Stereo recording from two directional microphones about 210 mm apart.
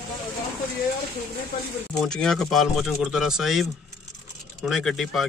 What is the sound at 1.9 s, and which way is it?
Speech, 5° left (ahead or behind).